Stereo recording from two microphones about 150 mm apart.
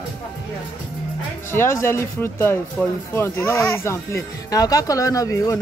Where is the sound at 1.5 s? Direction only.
15° left (ahead or behind).